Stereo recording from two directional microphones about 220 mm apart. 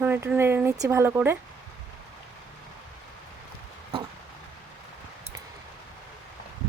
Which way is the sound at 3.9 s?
25° right (ahead or behind).